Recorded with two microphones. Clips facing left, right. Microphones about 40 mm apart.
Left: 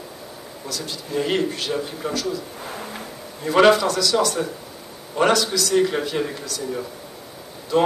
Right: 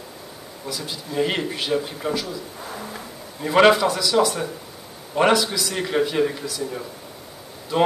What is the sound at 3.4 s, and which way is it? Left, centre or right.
A man's voice, centre.